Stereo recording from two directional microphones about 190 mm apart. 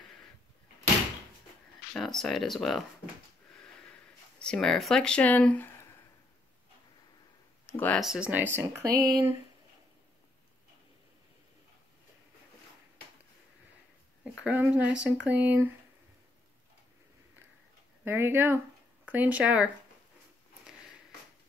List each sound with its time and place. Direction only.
2.0 s speech: centre (ahead or behind)
4.4 s speech: 5° left (ahead or behind)
7.8 s speech: centre (ahead or behind); by 9.3 s 20° right (ahead or behind)
14.4 s speech: 5° right (ahead or behind)
18.0 s speech: 10° right (ahead or behind)